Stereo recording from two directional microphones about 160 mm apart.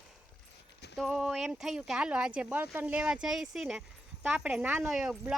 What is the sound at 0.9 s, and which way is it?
Speech, 5° right (ahead or behind).